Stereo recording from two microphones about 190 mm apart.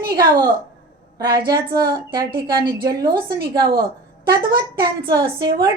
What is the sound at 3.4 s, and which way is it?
Speech, 50° right (ahead or behind).